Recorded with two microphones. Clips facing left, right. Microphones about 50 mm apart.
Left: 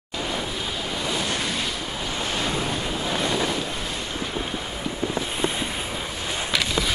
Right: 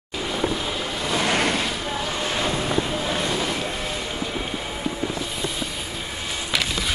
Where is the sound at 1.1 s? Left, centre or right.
Right.